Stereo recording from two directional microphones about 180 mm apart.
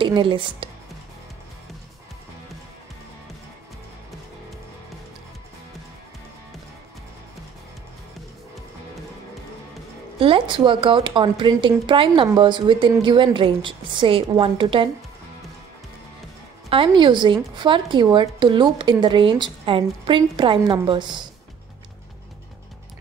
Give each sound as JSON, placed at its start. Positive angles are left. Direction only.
{"t": 0.0, "sound": "speech", "side_deg": -25}
{"t": 10.1, "sound": "speech", "side_deg": -30}
{"t": 16.6, "sound": "speech", "side_deg": -30}